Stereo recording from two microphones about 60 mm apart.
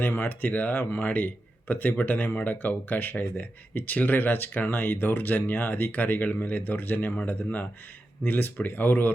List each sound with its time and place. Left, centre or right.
0.0 s speech: left